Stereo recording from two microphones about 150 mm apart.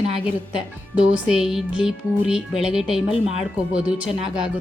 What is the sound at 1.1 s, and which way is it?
Speech, 5° right (ahead or behind).